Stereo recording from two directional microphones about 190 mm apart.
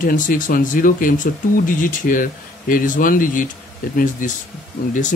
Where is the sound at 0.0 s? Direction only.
45° left (ahead or behind).